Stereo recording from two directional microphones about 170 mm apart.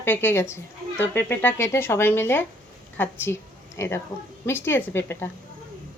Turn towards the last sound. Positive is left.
turn(degrees=15)  # may be behind; listen again after turning